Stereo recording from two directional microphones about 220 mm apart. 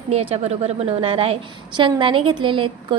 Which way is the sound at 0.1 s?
30° right (ahead or behind).